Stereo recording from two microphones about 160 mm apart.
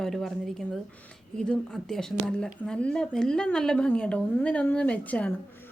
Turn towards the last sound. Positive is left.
turn(degrees=10)  # may be behind; listen again after turning